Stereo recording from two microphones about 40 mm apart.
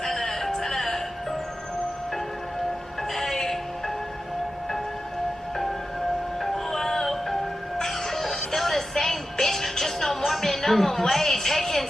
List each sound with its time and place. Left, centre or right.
0.0 s music: centre
3.2 s music: centre
6.4 s music: centre